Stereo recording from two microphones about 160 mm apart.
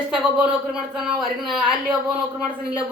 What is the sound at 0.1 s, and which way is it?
Speech, 5° right (ahead or behind).